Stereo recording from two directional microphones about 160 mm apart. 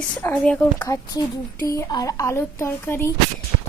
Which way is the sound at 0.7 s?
20° left (ahead or behind).